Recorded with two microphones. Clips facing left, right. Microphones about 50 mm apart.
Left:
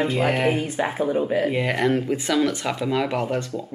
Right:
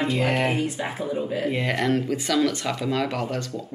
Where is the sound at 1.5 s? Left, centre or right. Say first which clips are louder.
Left 2 dB; centre.